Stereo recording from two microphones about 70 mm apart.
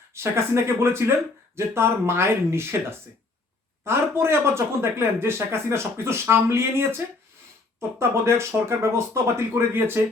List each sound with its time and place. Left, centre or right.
0.1 s speech: right
3.8 s speech: right